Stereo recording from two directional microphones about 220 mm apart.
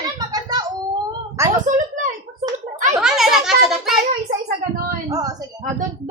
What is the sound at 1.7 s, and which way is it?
Speech, 35° right (ahead or behind).